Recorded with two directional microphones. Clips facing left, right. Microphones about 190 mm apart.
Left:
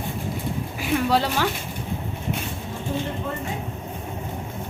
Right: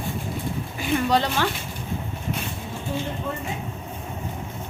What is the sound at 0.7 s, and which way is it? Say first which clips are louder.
Speech: even; 5° left (ahead or behind).